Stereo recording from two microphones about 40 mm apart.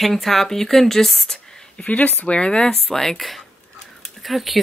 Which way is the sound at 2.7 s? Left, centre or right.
Centre.